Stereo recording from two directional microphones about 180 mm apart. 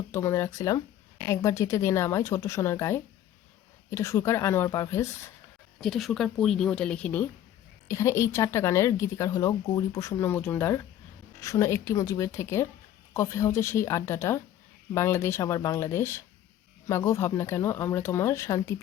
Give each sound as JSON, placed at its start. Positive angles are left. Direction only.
{"t": 0.1, "sound": "speech", "side_deg": 15}
{"t": 5.8, "sound": "speech", "side_deg": 0}